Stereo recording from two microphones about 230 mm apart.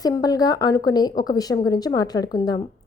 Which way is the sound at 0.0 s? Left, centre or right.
Centre.